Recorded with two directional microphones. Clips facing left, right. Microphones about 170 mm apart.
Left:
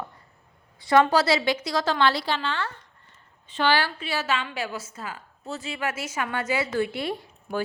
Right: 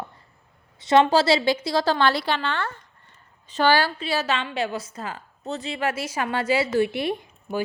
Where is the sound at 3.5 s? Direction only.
40° right (ahead or behind); by 7.2 s 20° right (ahead or behind).